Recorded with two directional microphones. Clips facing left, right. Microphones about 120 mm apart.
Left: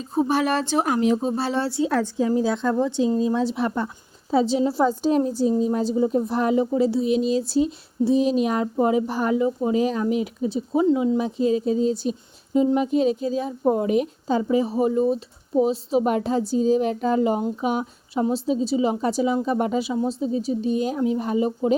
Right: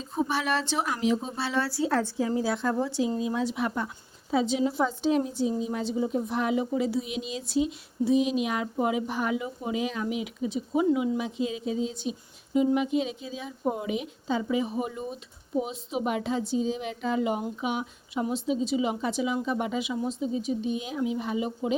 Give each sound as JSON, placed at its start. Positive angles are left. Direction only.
{"t": 0.1, "sound": "speech", "side_deg": 40}
{"t": 1.6, "sound": "speech", "side_deg": 25}
{"t": 3.2, "sound": "speech", "side_deg": 30}
{"t": 14.4, "sound": "speech", "side_deg": 35}